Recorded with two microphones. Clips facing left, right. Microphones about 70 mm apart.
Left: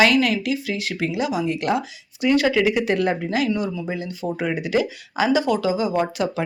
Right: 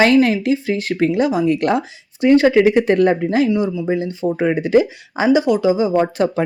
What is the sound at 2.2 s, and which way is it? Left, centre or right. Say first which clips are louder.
Speech: right 7 dB; right.